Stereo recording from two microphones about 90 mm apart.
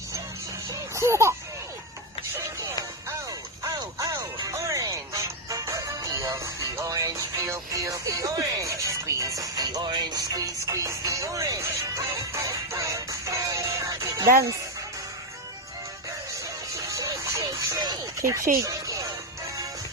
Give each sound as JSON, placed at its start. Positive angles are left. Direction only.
{"t": 0.7, "sound": "music", "side_deg": -35}
{"t": 3.6, "sound": "music", "side_deg": -40}
{"t": 16.8, "sound": "music", "side_deg": -35}
{"t": 17.8, "sound": "a sound", "side_deg": -40}